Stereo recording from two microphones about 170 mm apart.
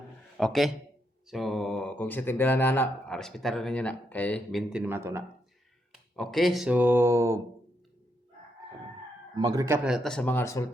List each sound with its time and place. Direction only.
0.3 s speech: centre (ahead or behind)
4.7 s speech: 10° right (ahead or behind)
6.1 s speech: centre (ahead or behind); by 7.4 s 15° right (ahead or behind)
9.3 s speech: 25° right (ahead or behind)
9.8 s speech: centre (ahead or behind); by 10.7 s 15° left (ahead or behind)